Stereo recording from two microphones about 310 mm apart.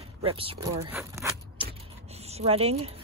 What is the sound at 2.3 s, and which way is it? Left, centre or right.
Speech, centre.